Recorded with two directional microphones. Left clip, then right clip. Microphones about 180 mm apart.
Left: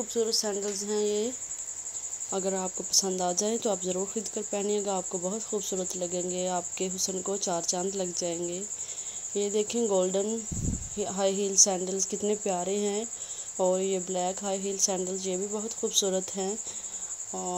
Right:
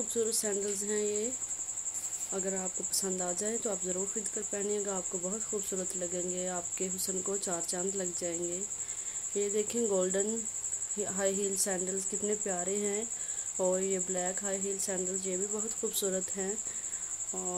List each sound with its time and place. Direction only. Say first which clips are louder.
0.1 s a woman's voice: left 5 dB; 5° left (ahead or behind)
0.8 s speech: left 7 dB; 15° left (ahead or behind)
2.3 s speech: left 6 dB; 25° left (ahead or behind)
17.3 s cricket: left 5 dB; 15° left (ahead or behind)